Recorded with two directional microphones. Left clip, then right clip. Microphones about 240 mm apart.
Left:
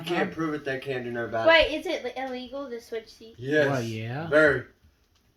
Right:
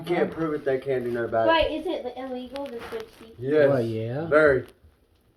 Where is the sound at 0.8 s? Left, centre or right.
Centre.